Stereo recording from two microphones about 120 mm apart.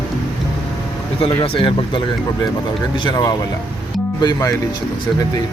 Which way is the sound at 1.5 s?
45° left (ahead or behind).